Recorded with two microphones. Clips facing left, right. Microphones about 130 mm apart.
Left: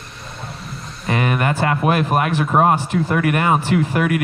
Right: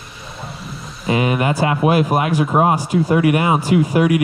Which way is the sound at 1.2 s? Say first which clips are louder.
Right 2 dB; 15° right (ahead or behind).